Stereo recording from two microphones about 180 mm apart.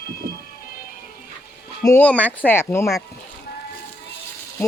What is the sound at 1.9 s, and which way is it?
Speech, 10° left (ahead or behind).